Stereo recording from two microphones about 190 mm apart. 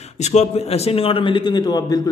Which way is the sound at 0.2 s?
35° left (ahead or behind).